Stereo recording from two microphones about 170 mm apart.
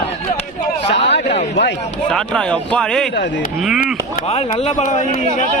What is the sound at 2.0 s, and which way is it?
A man's voice, 5° left (ahead or behind).